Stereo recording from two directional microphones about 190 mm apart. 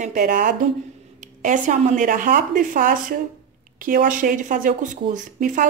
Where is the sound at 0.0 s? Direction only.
40° right (ahead or behind).